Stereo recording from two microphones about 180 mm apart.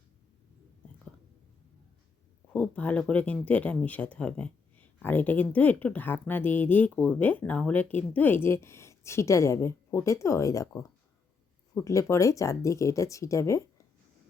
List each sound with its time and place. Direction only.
2.5 s speech: 5° left (ahead or behind)
11.7 s speech: 15° left (ahead or behind)